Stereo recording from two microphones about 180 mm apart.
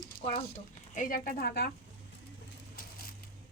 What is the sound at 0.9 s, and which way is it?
Speech, 50° left (ahead or behind).